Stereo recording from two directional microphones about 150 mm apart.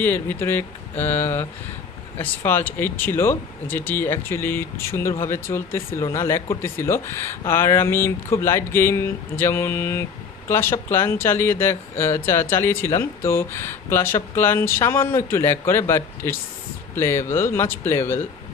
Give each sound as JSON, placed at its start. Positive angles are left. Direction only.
{"t": 0.0, "sound": "speech", "side_deg": 15}